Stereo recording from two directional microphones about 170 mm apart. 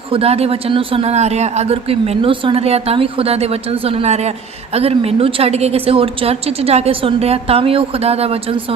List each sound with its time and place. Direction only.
0.1 s a man's voice: 35° right (ahead or behind)